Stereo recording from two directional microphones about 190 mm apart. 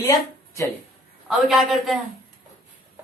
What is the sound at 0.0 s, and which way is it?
Speech, 20° left (ahead or behind).